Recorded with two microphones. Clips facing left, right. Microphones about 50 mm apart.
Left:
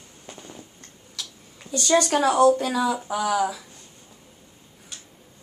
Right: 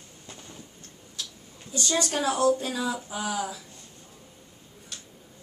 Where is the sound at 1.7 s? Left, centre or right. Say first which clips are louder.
Left 7 dB; left.